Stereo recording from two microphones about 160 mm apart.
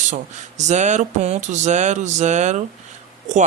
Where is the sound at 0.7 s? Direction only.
50° right (ahead or behind).